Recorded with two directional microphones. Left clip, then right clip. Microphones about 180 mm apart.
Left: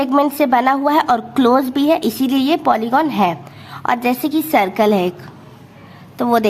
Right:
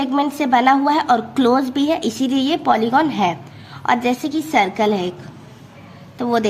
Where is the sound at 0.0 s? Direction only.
30° left (ahead or behind).